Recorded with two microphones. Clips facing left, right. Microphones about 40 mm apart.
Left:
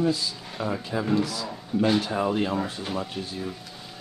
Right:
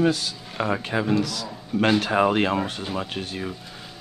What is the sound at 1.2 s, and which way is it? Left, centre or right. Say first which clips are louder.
A man's voice: right 1 dB; right.